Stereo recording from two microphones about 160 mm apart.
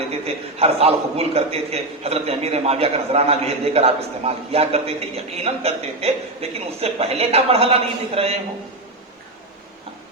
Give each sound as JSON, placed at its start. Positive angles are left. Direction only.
{"t": 0.6, "sound": "a man's voice", "side_deg": -40}